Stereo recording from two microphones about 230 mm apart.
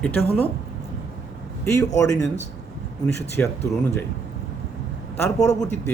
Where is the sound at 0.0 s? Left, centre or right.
Centre.